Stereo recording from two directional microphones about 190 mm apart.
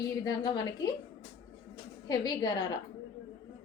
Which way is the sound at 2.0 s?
20° left (ahead or behind).